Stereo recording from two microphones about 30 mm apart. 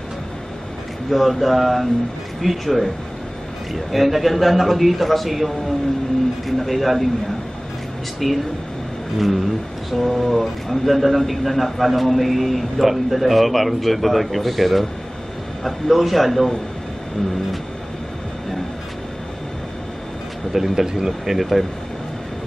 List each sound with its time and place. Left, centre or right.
1.1 s speech: centre
8.2 s speech: centre
20.5 s speech: centre
20.8 s speech: centre
21.3 s speech: centre